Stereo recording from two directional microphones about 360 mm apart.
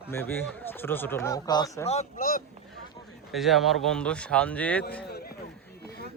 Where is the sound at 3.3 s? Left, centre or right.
Centre.